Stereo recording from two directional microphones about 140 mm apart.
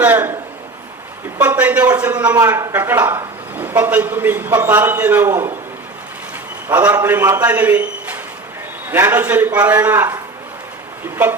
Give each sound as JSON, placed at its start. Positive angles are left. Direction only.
{"t": 0.0, "sound": "a man's voice", "side_deg": -15}
{"t": 1.4, "sound": "a man's voice", "side_deg": -10}
{"t": 2.3, "sound": "a man's voice", "side_deg": -20}
{"t": 6.7, "sound": "a man's voice", "side_deg": -15}